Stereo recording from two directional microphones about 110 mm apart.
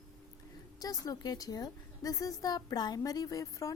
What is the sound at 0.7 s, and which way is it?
A woman's voice, 35° left (ahead or behind).